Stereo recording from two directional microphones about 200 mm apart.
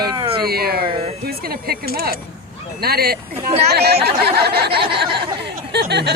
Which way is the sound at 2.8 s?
50° right (ahead or behind).